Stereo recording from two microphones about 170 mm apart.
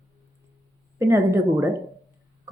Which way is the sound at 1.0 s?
15° right (ahead or behind).